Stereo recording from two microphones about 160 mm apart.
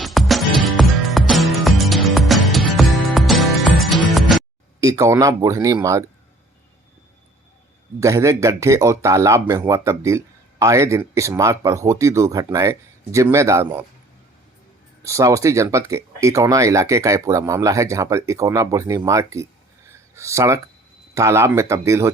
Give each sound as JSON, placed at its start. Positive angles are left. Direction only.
{"t": 0.0, "sound": "music", "side_deg": 0}
{"t": 4.8, "sound": "speech", "side_deg": -20}
{"t": 7.9, "sound": "speech", "side_deg": -20}
{"t": 15.0, "sound": "speech", "side_deg": -20}
{"t": 19.9, "sound": "a sound", "side_deg": -15}
{"t": 21.2, "sound": "speech", "side_deg": -20}